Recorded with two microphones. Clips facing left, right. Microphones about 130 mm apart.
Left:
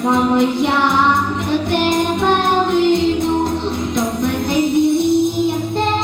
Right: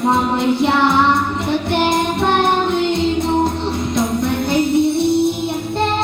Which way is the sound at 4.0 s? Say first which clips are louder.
Right 1 dB; 60° left (ahead or behind).